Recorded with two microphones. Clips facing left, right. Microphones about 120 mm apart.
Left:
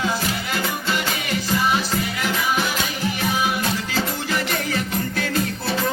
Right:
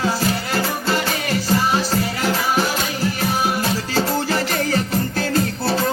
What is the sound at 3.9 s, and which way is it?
Music, 35° right (ahead or behind).